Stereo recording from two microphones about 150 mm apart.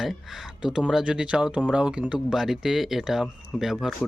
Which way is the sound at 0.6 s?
5° right (ahead or behind).